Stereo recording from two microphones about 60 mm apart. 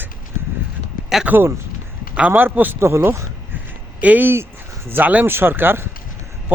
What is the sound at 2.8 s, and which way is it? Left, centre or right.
Speech, right.